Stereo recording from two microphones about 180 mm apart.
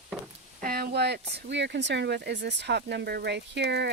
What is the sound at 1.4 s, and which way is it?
Speech, 75° right (ahead or behind).